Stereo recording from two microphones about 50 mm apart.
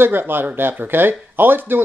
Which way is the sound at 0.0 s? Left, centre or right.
Right.